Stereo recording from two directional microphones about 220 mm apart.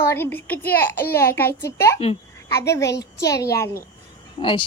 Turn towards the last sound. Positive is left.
turn(degrees=20)  # may be behind; listen again after turning